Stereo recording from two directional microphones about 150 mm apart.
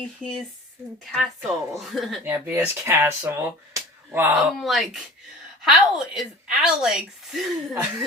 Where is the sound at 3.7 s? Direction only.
15° right (ahead or behind).